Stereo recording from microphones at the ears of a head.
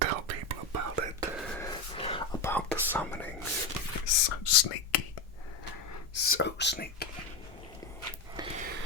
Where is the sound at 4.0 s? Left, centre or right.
Left.